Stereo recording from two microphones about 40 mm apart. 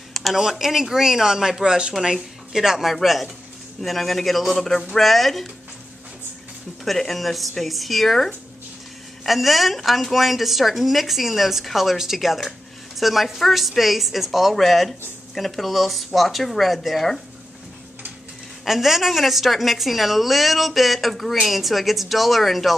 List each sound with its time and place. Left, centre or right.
0.3 s speech: centre
2.9 s a woman's voice: centre
6.8 s a woman's voice: centre
18.6 s a woman's voice: centre